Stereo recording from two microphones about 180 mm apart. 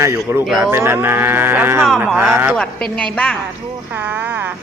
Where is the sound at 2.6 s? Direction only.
5° left (ahead or behind).